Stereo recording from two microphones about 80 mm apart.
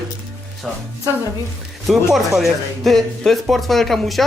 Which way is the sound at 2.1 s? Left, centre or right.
Centre.